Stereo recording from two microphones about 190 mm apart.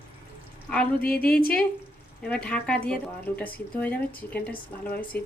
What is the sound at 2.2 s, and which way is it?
Speech, 5° left (ahead or behind).